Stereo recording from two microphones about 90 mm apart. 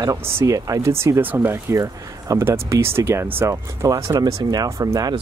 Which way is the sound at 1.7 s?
40° right (ahead or behind).